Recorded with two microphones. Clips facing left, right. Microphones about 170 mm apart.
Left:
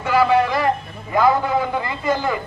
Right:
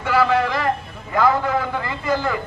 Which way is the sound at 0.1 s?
15° left (ahead or behind).